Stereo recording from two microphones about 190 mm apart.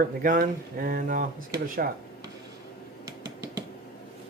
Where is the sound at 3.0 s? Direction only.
20° right (ahead or behind).